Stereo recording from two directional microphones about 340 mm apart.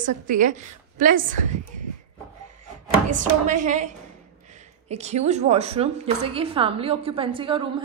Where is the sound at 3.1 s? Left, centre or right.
Right.